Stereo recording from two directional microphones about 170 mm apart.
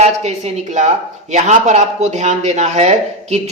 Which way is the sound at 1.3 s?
45° right (ahead or behind).